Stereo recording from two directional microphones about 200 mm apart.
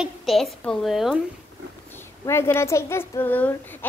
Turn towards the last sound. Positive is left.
turn(degrees=10)  # may be behind; listen again after turning